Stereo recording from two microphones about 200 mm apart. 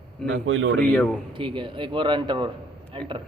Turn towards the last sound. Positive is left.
turn(degrees=-25)  # may be behind; listen again after turning